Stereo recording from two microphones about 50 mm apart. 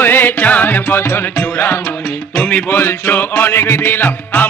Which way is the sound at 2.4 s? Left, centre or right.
Left.